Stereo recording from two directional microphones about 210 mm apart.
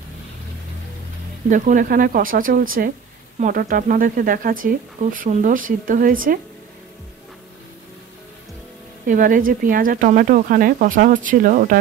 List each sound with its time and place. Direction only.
1.5 s speech: 40° right (ahead or behind)
9.0 s speech: 40° right (ahead or behind)